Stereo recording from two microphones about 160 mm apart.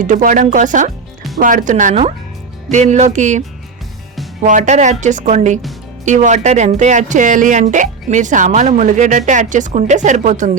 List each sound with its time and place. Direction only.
0.0 s speech: 55° right (ahead or behind)
4.4 s speech: 50° right (ahead or behind)